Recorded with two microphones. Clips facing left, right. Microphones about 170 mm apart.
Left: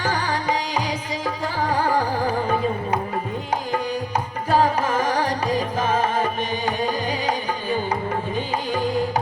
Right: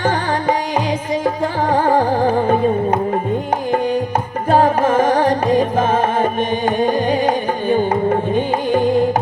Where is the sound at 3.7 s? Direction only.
55° right (ahead or behind).